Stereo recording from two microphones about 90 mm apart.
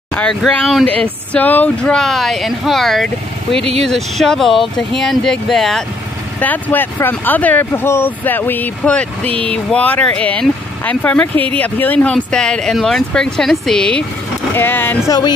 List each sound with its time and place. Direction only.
0.3 s speech: 5° left (ahead or behind)
0.8 s speech: 15° left (ahead or behind)
6.4 s speech: 20° left (ahead or behind)
14.5 s speech: 25° left (ahead or behind)
15.0 s speech: 50° left (ahead or behind)